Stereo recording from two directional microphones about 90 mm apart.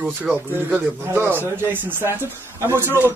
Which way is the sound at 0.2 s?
15° right (ahead or behind).